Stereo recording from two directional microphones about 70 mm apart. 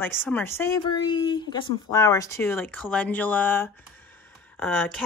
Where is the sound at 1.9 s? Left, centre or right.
Left.